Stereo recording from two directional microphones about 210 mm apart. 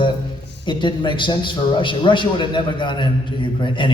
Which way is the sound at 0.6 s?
20° left (ahead or behind).